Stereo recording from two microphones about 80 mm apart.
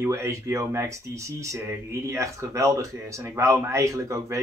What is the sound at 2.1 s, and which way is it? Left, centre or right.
Speech, right.